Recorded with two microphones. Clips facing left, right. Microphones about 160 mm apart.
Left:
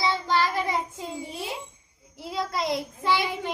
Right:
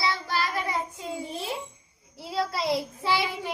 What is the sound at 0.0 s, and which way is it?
Child singing, 20° left (ahead or behind).